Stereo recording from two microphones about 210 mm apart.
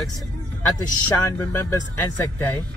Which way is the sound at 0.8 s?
15° left (ahead or behind).